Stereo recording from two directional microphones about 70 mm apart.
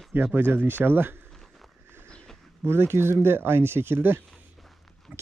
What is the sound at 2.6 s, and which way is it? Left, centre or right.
Speech, right.